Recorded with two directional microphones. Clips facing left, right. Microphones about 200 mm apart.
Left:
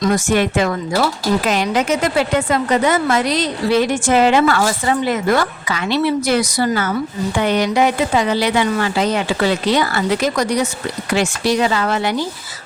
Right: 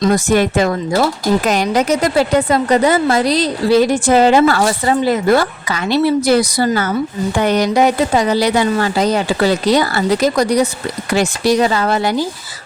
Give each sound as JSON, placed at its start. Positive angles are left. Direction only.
{"t": 0.0, "sound": "a woman's voice", "side_deg": -35}